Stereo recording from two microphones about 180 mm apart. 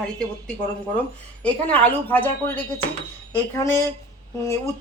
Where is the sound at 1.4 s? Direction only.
10° left (ahead or behind).